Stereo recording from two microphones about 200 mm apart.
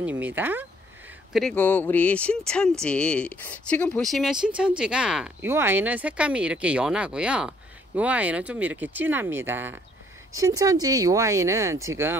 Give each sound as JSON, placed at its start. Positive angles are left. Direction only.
{"t": 0.0, "sound": "speech", "side_deg": -10}
{"t": 1.3, "sound": "speech", "side_deg": 5}